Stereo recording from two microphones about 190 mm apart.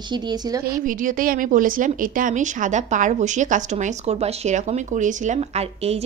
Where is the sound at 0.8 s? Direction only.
45° right (ahead or behind).